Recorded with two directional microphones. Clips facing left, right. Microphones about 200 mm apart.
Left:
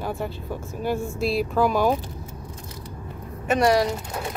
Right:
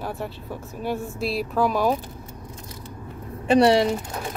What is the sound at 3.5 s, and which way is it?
Speech, 30° right (ahead or behind).